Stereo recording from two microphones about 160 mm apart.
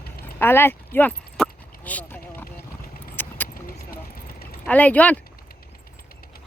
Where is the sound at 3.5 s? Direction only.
65° left (ahead or behind).